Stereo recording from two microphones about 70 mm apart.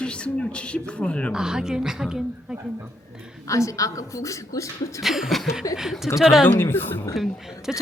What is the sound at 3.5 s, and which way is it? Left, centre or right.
Speech, left.